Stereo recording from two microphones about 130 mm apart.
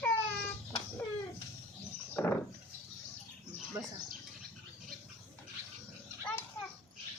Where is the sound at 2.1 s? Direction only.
15° left (ahead or behind).